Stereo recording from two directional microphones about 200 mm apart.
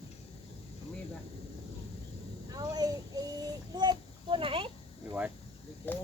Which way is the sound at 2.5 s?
20° right (ahead or behind).